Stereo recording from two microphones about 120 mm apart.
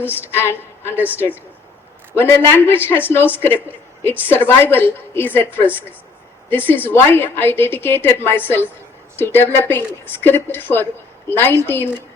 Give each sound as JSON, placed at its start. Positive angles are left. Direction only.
{"t": 0.2, "sound": "a woman's voice", "side_deg": 20}
{"t": 0.9, "sound": "a woman's voice", "side_deg": -15}
{"t": 2.1, "sound": "a man's voice", "side_deg": 20}
{"t": 6.5, "sound": "a woman's voice", "side_deg": 15}